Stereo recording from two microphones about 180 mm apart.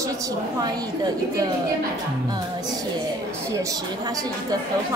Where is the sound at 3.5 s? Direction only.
20° right (ahead or behind).